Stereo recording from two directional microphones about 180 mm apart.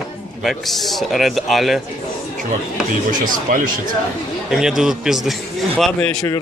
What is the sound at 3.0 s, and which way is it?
Speech, 50° right (ahead or behind).